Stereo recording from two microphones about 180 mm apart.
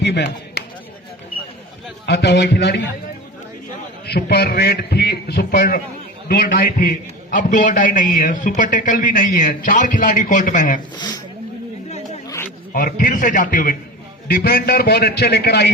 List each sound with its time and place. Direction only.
0.0 s chopping: 70° left (ahead or behind)
2.0 s a man's voice: 70° left (ahead or behind)
4.0 s a man's voice: 60° left (ahead or behind); by 10.8 s 45° left (ahead or behind)
11.9 s chatter: 35° left (ahead or behind)
12.7 s a man's voice: 50° left (ahead or behind)